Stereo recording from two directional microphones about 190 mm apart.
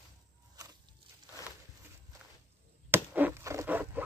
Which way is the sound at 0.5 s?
20° right (ahead or behind).